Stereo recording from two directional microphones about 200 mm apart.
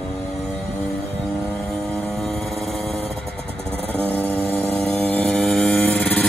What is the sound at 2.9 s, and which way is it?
Motorcycle, 5° left (ahead or behind).